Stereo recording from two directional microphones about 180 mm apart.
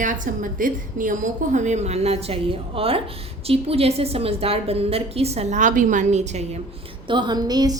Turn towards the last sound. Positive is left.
turn(degrees=-20)  # may be behind; listen again after turning